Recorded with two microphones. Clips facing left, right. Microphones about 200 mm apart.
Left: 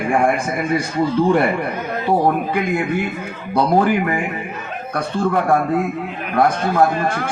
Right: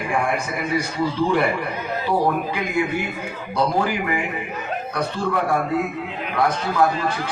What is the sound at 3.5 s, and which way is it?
Speech, 55° left (ahead or behind).